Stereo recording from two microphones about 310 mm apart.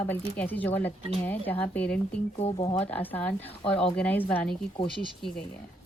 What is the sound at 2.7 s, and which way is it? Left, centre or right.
Speech, centre.